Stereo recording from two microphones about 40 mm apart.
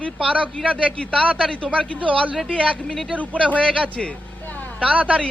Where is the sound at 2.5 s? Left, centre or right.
Left.